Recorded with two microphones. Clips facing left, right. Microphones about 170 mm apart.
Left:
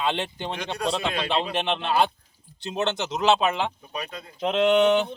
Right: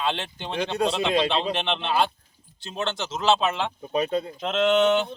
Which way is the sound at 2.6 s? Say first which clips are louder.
Left 3 dB; 20° left (ahead or behind).